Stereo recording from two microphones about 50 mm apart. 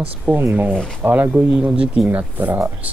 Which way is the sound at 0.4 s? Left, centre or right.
Right.